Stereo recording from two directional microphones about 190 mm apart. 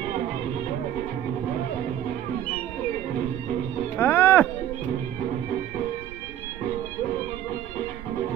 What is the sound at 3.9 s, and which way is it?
Music, 10° left (ahead or behind).